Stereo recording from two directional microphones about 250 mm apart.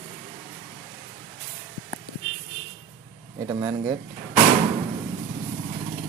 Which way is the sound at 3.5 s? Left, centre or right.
Centre.